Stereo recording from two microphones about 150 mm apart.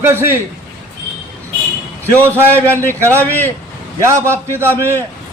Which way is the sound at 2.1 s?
15° right (ahead or behind).